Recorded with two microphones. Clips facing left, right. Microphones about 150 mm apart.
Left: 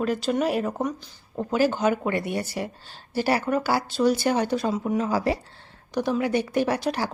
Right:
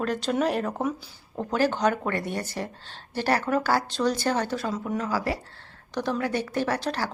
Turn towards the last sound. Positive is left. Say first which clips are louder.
# left 3 dB
turn(degrees=15)  # may be behind; listen again after turning